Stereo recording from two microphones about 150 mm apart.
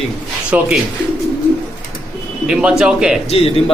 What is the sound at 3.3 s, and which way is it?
Speech, 40° left (ahead or behind).